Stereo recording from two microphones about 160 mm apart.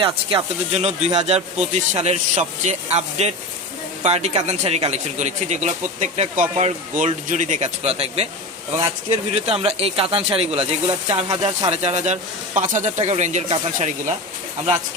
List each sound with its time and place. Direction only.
0.0 s speech: 35° right (ahead or behind)